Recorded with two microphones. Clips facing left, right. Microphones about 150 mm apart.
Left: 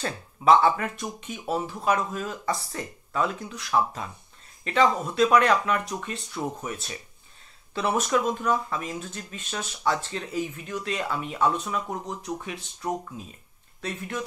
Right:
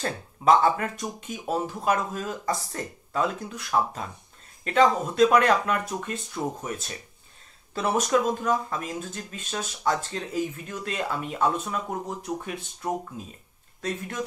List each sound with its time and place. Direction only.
0.0 s speech: 40° right (ahead or behind)
13.7 s speech: 45° right (ahead or behind)